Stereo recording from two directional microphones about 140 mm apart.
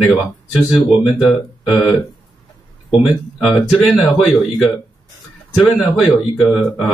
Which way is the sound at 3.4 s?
Centre (ahead or behind).